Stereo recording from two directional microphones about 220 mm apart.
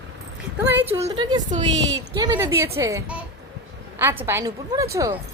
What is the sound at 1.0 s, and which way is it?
A woman's voice, 20° right (ahead or behind).